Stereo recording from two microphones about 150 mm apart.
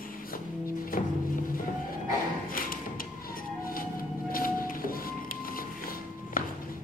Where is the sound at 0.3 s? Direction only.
70° left (ahead or behind).